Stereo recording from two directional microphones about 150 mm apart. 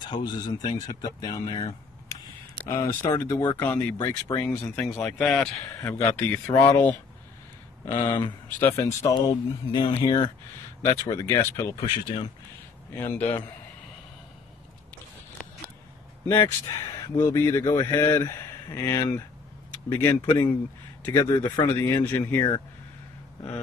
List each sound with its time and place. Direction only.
0.0 s speech: 30° left (ahead or behind)
4.4 s speech: 10° left (ahead or behind)
12.9 s speech: 15° left (ahead or behind)
16.3 s speech: 25° left (ahead or behind)
22.0 s speech: 10° left (ahead or behind)